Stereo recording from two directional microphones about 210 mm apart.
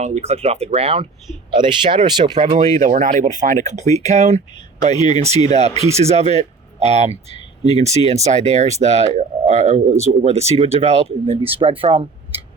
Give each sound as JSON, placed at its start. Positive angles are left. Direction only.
{"t": 0.0, "sound": "speech", "side_deg": -30}
{"t": 2.8, "sound": "speech", "side_deg": -35}
{"t": 4.9, "sound": "speech", "side_deg": 20}
{"t": 5.5, "sound": "speech", "side_deg": -30}